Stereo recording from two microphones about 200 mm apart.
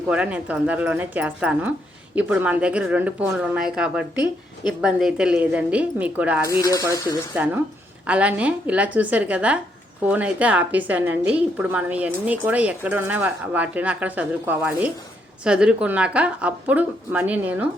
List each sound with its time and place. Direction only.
0.1 s a woman's voice: 5° right (ahead or behind)
6.6 s speech: 15° left (ahead or behind)
6.8 s a woman's voice: 15° right (ahead or behind)